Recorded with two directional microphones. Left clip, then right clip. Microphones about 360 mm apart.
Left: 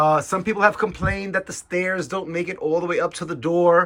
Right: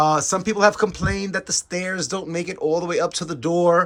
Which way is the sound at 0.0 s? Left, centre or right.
Centre.